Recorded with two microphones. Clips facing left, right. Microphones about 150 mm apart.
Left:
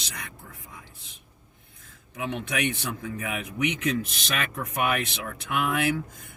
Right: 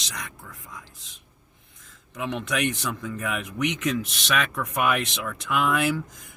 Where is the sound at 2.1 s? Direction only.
70° right (ahead or behind).